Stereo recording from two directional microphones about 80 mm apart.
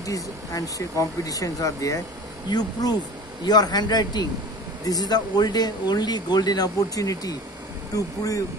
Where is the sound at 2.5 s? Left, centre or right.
Left.